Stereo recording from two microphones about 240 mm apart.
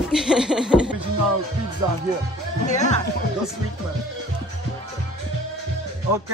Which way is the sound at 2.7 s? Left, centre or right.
Left.